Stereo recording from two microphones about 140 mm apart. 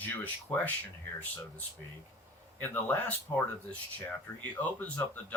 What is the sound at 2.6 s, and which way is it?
Speech, 10° left (ahead or behind).